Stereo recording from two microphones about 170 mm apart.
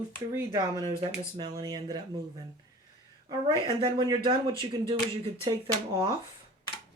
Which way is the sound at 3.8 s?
25° right (ahead or behind).